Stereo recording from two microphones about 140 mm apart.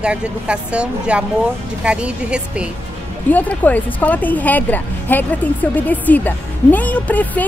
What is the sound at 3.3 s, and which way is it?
Speech, 10° left (ahead or behind).